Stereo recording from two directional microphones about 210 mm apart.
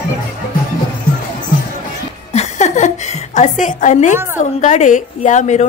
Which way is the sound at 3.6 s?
35° left (ahead or behind).